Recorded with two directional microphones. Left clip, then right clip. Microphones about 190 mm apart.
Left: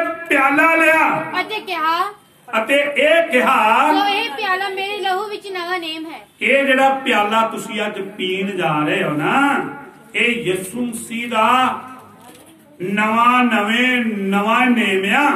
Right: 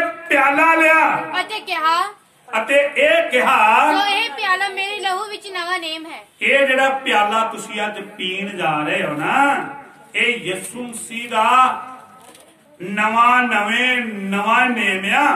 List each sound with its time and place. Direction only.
0.3 s a man's voice: centre (ahead or behind)
1.3 s a child's voice: 30° right (ahead or behind)
2.5 s a man's voice: centre (ahead or behind)
3.9 s a woman's voice: 30° right (ahead or behind)
6.4 s a man's voice: centre (ahead or behind)
12.8 s a man's voice: centre (ahead or behind)